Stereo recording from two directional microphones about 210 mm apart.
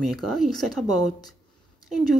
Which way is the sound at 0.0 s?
Centre (ahead or behind).